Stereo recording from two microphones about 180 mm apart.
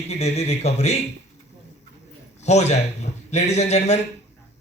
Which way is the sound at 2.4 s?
40° left (ahead or behind).